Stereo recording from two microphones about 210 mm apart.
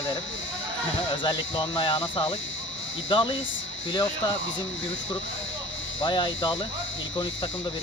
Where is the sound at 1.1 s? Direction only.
20° left (ahead or behind).